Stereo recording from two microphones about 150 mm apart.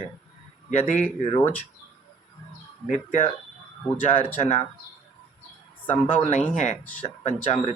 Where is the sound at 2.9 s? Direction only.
50° left (ahead or behind).